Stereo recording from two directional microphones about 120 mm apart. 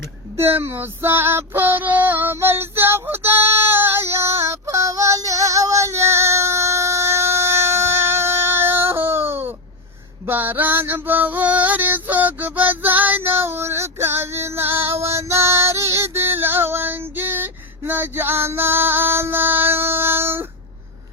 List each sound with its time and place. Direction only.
0.3 s female singing: 20° right (ahead or behind)
10.2 s a sound: 15° right (ahead or behind)
15.1 s female singing: 25° right (ahead or behind)